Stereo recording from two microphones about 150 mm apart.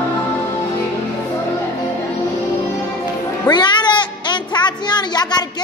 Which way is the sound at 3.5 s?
30° left (ahead or behind).